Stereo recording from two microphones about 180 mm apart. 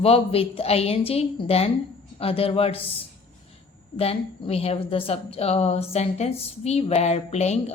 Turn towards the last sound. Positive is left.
turn(degrees=35)  # may be behind; listen again after turning